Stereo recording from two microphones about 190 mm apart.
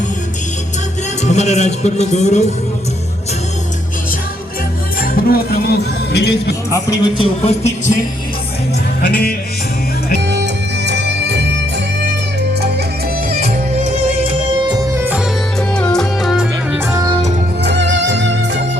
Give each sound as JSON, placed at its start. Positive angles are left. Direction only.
{"t": 1.2, "sound": "speech", "side_deg": 35}
{"t": 4.9, "sound": "music", "side_deg": 55}
{"t": 6.7, "sound": "a man's voice", "side_deg": 25}
{"t": 10.2, "sound": "music", "side_deg": -65}
{"t": 13.4, "sound": "music", "side_deg": -35}
{"t": 14.6, "sound": "music", "side_deg": -25}
{"t": 14.9, "sound": "music", "side_deg": -10}
{"t": 15.7, "sound": "music", "side_deg": 5}
{"t": 16.9, "sound": "music", "side_deg": -20}
{"t": 17.6, "sound": "music", "side_deg": -65}